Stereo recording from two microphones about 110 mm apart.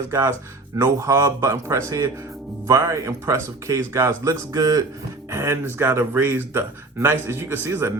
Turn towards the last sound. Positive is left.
turn(degrees=-25)  # may be behind; listen again after turning